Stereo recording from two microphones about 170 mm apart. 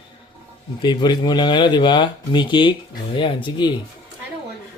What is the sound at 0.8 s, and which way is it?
Speech, 25° left (ahead or behind).